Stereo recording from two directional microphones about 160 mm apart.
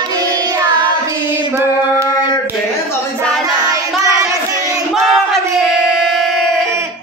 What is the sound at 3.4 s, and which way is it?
Child singing, 25° right (ahead or behind).